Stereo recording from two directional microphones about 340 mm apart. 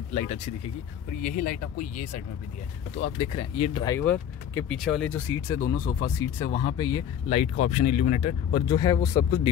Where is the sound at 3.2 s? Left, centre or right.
Centre.